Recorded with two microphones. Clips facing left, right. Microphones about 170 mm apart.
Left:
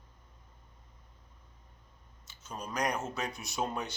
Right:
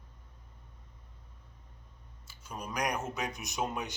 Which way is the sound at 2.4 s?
10° right (ahead or behind).